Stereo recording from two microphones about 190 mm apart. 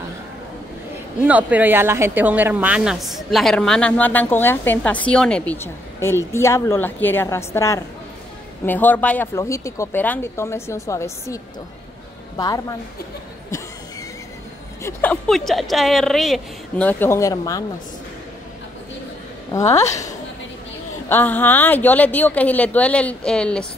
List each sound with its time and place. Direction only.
1.2 s a woman's voice: 10° right (ahead or behind); by 12.7 s 20° left (ahead or behind)
14.8 s a woman's voice: 10° left (ahead or behind)
19.6 s a woman's voice: 35° left (ahead or behind)
21.1 s speech: 10° left (ahead or behind)